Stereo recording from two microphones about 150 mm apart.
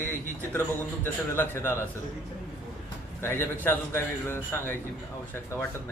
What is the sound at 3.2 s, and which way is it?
A man's voice, 15° left (ahead or behind).